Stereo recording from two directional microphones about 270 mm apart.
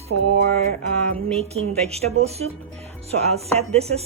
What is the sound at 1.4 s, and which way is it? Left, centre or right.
Music, right.